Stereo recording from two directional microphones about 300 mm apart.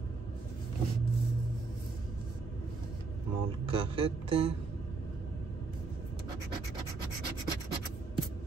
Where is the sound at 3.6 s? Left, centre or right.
Centre.